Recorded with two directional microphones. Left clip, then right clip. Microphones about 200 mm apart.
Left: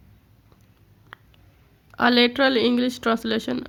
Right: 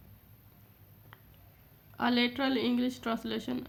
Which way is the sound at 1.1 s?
35° left (ahead or behind).